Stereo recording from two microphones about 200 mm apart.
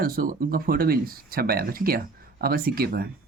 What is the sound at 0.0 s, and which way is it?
Speech, 45° right (ahead or behind).